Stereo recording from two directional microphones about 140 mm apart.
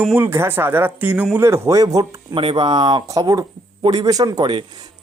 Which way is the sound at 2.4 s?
35° right (ahead or behind).